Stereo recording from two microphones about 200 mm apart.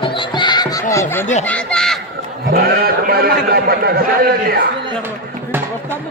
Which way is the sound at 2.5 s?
50° right (ahead or behind).